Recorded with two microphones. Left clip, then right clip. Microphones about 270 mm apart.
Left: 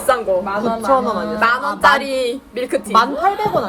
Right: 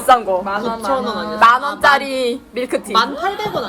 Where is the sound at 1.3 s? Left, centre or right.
Right.